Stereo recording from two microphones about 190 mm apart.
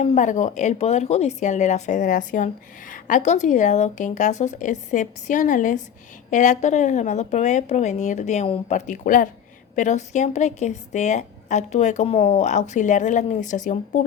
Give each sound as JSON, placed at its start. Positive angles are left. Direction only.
{"t": 0.0, "sound": "a woman's voice", "side_deg": 35}
{"t": 8.7, "sound": "a woman's voice", "side_deg": 45}